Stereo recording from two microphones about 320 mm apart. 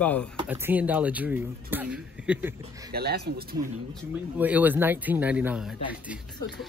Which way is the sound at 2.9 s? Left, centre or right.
Right.